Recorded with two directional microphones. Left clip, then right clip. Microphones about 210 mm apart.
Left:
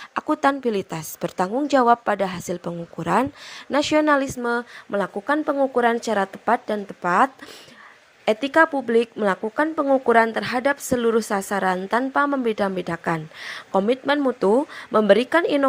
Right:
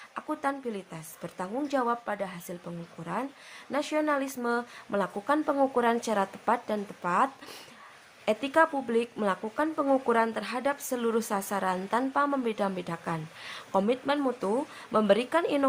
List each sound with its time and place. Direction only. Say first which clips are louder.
0.1 s a woman's voice: left 11 dB; 40° left (ahead or behind)
4.3 s a woman's voice: left 6 dB; 25° left (ahead or behind)